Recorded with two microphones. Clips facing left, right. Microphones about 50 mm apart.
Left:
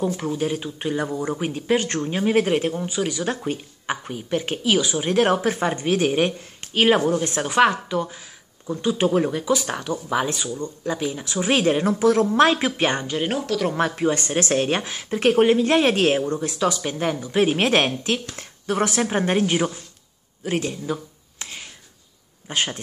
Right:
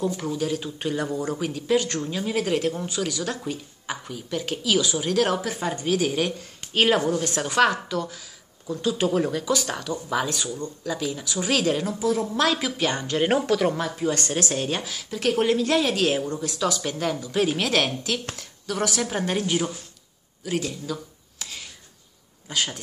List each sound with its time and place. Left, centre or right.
0.0 s speech: left
3.4 s speech: left
11.8 s a woman's voice: left
12.1 s speech: left
12.4 s speech: left
13.3 s speech: centre
13.7 s a woman's voice: left
16.5 s speech: left
20.4 s a sound: left
22.5 s speech: left